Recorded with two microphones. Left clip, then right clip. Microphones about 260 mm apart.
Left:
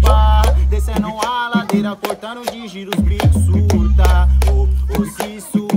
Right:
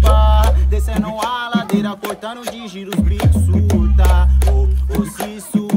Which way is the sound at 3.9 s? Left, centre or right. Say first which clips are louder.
Left 1 dB; centre.